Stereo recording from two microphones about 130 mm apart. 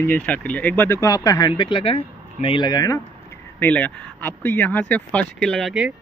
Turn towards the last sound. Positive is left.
turn(degrees=0)  # may be behind; listen again after turning